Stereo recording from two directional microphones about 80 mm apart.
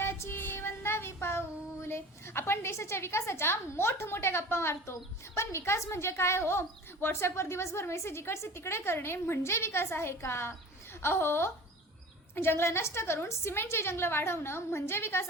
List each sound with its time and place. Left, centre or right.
0.0 s child singing: left
5.4 s a woman's voice: left